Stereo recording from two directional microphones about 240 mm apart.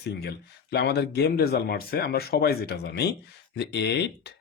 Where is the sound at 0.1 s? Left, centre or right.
Left.